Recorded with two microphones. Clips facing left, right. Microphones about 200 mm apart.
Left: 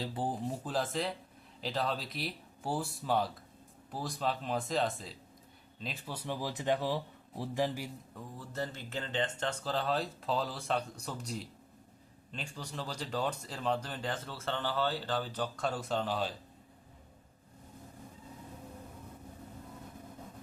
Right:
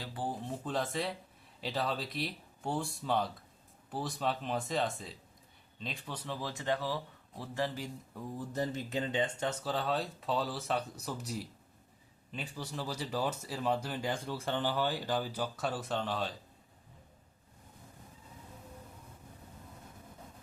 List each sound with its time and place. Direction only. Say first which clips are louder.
0.0 s speech: left 3 dB; 20° left (ahead or behind)
0.4 s speech: left 1 dB; 5° left (ahead or behind)
8.1 s speech: right 8 dB; 15° right (ahead or behind); by 16.3 s centre (ahead or behind)